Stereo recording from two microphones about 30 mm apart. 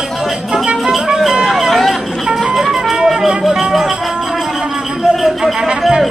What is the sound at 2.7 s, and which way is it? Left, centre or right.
Music, centre.